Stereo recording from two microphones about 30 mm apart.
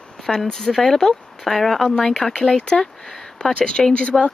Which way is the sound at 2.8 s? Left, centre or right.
Left.